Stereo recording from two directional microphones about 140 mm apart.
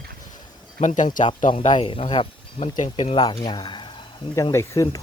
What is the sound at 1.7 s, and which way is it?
Speech, 40° left (ahead or behind).